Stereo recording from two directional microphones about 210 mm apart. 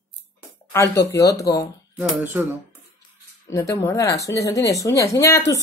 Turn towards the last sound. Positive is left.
turn(degrees=15)  # may be behind; listen again after turning